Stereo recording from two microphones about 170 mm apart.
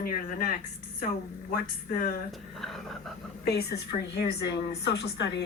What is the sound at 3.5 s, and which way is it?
A woman's voice, 70° left (ahead or behind).